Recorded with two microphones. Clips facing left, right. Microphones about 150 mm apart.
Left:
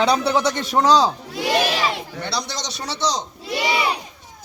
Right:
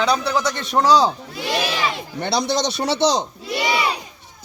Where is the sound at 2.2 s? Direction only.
60° right (ahead or behind).